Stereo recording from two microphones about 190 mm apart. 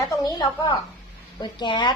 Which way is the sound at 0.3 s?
20° left (ahead or behind).